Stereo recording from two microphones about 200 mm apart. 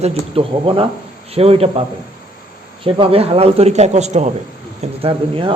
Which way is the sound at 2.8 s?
25° right (ahead or behind).